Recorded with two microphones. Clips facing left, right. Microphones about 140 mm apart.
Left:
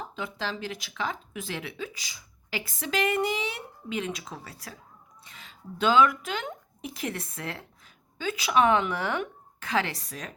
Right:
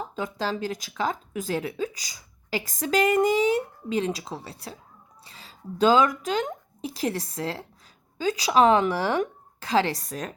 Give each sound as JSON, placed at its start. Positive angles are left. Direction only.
{"t": 0.2, "sound": "speech", "side_deg": -40}
{"t": 10.0, "sound": "a woman's voice", "side_deg": -45}